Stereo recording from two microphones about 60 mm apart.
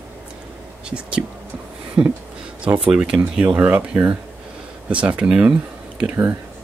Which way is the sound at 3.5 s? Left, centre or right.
Right.